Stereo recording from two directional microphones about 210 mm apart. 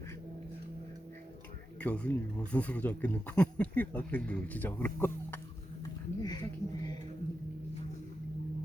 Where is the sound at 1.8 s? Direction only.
5° left (ahead or behind).